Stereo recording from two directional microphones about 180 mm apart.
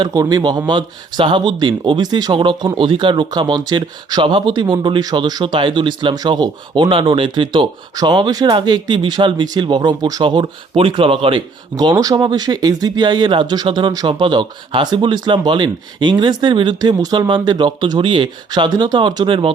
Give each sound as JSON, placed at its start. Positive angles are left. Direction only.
{"t": 0.0, "sound": "speech", "side_deg": -20}